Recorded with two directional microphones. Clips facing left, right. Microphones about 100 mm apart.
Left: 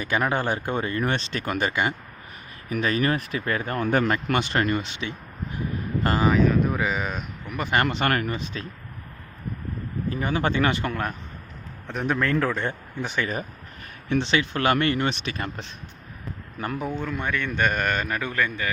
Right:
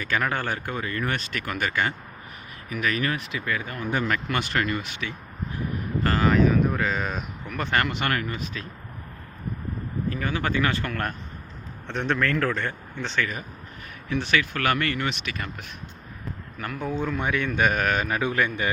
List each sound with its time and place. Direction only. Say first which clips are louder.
0.0 s speech: left 2 dB; 20° left (ahead or behind)
2.6 s speech: left 3 dB; 30° left (ahead or behind); by 4.1 s 60° left (ahead or behind)
4.4 s speech: left 3 dB; 20° left (ahead or behind)
6.3 s speech: even; centre (ahead or behind)
7.9 s speech: left 3 dB; 35° left (ahead or behind)
10.1 s speech: left 3 dB; 25° left (ahead or behind)
11.9 s speech: even; 5° left (ahead or behind)
12.2 s speech: left 3 dB; 15° left (ahead or behind)
14.1 s speech: left 2 dB; 25° left (ahead or behind)
16.6 s speech: left 4 dB; 30° left (ahead or behind)
17.0 s a man's voice: right 2 dB; 10° right (ahead or behind)